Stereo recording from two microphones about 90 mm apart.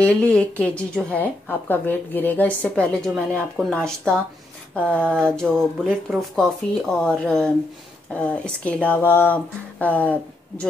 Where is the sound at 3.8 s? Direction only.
5° left (ahead or behind).